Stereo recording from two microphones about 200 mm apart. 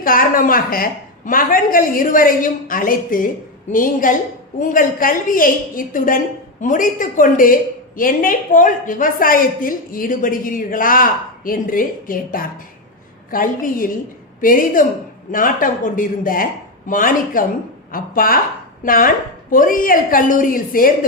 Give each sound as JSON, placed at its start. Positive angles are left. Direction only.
{"t": 0.0, "sound": "a woman's voice", "side_deg": 45}